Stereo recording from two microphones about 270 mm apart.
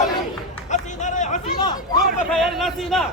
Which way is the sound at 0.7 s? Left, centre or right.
Left.